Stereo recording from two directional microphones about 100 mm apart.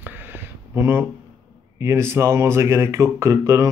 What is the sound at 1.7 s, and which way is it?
Speech, 30° right (ahead or behind).